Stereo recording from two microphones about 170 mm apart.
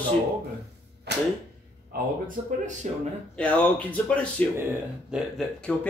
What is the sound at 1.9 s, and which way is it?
Speech, 50° right (ahead or behind).